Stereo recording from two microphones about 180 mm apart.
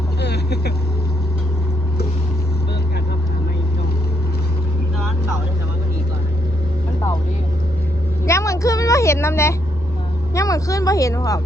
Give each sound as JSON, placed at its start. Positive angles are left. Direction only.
{"t": 0.2, "sound": "vehicle", "side_deg": 65}
{"t": 8.3, "sound": "vehicle", "side_deg": 15}
{"t": 10.3, "sound": "speech", "side_deg": 20}